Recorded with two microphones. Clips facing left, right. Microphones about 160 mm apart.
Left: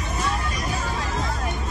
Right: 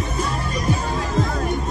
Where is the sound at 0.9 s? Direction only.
35° right (ahead or behind).